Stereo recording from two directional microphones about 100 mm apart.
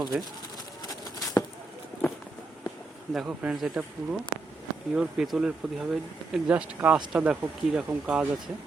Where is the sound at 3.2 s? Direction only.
15° right (ahead or behind).